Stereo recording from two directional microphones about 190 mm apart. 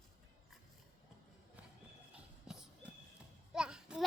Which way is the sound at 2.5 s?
5° right (ahead or behind).